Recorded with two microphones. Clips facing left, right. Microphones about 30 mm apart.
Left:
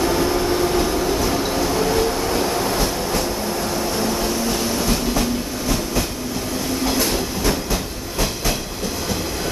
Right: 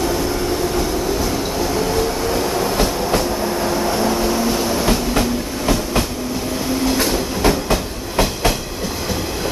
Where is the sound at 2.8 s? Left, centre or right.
Right.